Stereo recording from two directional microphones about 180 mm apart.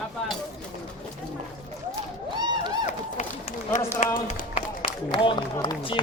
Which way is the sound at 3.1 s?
40° left (ahead or behind).